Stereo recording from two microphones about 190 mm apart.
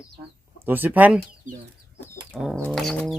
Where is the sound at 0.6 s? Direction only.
10° right (ahead or behind).